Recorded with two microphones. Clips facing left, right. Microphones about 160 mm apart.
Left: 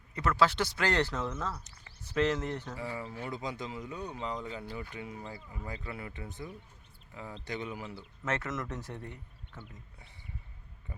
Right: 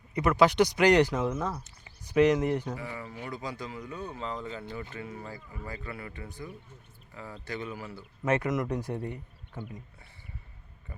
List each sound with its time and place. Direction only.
0.1 s speech: 15° right (ahead or behind)
3.2 s speech: 20° left (ahead or behind)
7.9 s speech: 15° right (ahead or behind)